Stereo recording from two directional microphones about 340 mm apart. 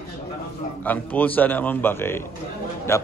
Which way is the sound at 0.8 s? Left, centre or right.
Centre.